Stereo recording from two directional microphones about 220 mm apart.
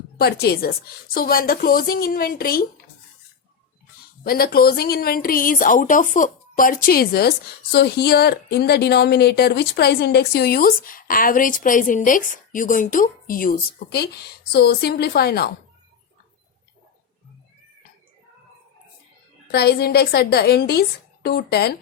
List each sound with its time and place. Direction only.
0.2 s a woman's voice: 45° left (ahead or behind)
4.2 s a woman's voice: 45° left (ahead or behind)
19.5 s a woman's voice: 45° left (ahead or behind)